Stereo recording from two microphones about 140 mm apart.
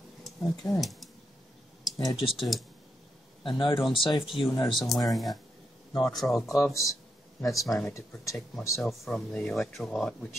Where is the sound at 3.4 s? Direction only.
35° left (ahead or behind).